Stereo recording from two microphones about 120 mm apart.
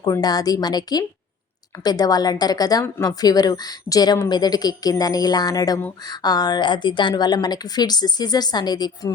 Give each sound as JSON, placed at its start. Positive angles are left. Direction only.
{"t": 0.0, "sound": "a woman's voice", "side_deg": 35}